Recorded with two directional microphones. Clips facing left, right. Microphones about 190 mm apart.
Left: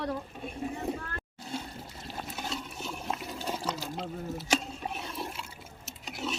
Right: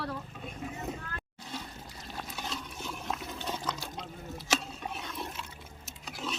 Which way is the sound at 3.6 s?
30° left (ahead or behind).